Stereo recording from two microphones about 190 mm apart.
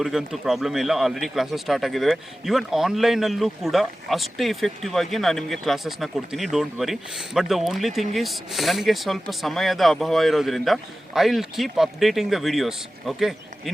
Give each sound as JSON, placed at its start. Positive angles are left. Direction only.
{"t": 0.0, "sound": "speech", "side_deg": 0}